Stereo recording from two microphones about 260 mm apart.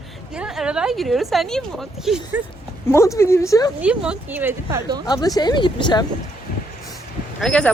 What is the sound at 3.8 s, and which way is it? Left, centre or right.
Speech, centre.